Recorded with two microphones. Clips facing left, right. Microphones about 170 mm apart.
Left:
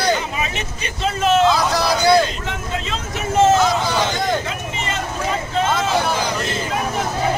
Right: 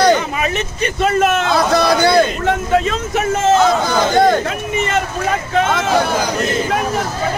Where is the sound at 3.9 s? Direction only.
55° right (ahead or behind).